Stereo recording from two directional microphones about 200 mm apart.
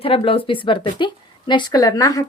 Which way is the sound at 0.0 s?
30° left (ahead or behind).